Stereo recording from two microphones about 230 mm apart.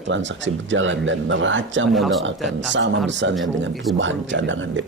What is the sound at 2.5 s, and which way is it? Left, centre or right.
A man's voice, right.